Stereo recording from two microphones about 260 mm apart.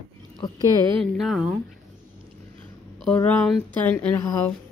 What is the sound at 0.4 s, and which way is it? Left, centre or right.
Speech, centre.